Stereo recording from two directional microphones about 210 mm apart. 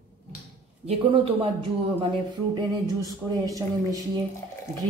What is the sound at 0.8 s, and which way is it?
Speech, 25° right (ahead or behind).